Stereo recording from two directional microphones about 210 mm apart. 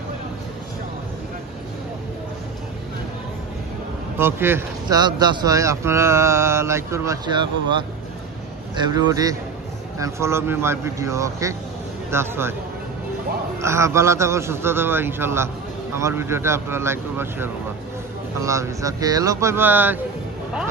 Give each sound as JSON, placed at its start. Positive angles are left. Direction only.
{"t": 4.2, "sound": "speech", "side_deg": -10}
{"t": 13.6, "sound": "speech", "side_deg": -15}